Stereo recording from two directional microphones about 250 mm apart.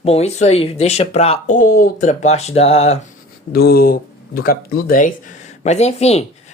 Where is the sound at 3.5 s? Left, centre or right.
Left.